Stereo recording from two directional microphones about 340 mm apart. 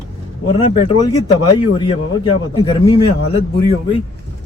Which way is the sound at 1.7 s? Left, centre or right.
Centre.